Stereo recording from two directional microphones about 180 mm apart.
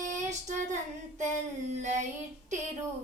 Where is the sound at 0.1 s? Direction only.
40° right (ahead or behind).